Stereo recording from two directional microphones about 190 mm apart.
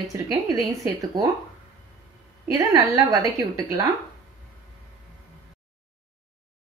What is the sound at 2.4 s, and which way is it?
A woman's voice, 20° right (ahead or behind).